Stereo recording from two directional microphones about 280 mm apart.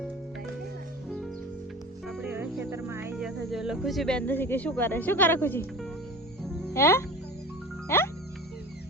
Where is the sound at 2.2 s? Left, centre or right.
Centre.